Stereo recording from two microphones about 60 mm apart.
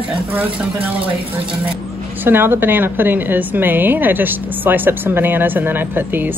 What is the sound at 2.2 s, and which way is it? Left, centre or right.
A woman's voice, right.